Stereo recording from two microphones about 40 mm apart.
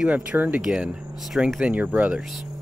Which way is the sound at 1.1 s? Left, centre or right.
Centre.